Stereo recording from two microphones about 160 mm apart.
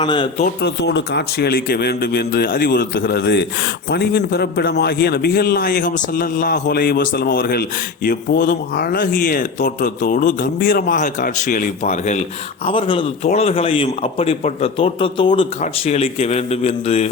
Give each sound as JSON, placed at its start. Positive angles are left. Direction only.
{"t": 0.0, "sound": "a man's voice", "side_deg": 30}
{"t": 0.6, "sound": "a man's voice", "side_deg": 90}
{"t": 12.6, "sound": "a man's voice", "side_deg": 35}